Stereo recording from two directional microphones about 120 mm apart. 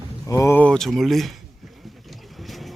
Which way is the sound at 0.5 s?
10° left (ahead or behind).